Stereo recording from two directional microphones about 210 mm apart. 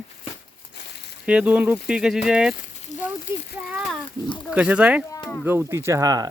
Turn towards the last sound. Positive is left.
turn(degrees=-15)  # may be behind; listen again after turning